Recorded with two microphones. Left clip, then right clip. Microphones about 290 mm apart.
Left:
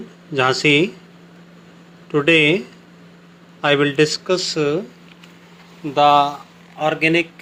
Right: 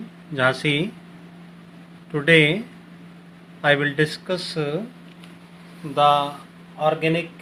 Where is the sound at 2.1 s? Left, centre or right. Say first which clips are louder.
Left 2 dB; centre.